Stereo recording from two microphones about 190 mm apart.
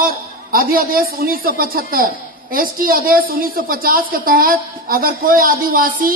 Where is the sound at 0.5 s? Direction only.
50° right (ahead or behind).